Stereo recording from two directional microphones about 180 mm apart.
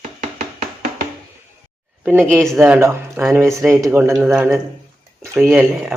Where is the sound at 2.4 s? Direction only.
Centre (ahead or behind).